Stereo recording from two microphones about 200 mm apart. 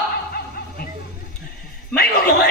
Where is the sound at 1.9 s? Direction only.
50° left (ahead or behind).